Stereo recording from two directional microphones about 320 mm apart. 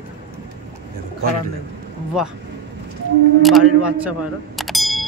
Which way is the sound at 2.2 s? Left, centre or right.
Centre.